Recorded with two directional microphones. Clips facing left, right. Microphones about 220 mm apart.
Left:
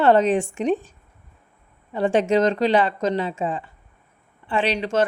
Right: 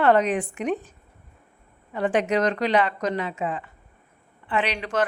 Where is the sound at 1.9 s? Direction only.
30° left (ahead or behind).